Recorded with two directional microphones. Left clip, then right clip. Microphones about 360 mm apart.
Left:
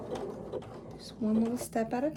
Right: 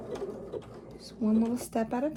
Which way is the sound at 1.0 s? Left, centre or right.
Centre.